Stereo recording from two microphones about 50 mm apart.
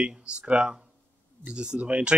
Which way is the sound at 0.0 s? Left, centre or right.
Right.